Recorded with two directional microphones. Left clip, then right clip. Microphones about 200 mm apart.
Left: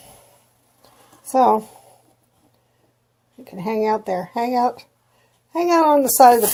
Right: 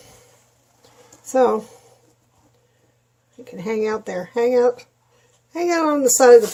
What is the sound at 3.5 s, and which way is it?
A woman's voice, 40° left (ahead or behind).